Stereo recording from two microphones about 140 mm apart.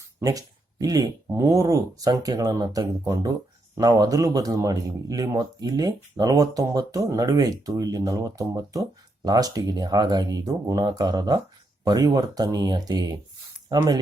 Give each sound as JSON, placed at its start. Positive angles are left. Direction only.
{"t": 0.2, "sound": "speech", "side_deg": -25}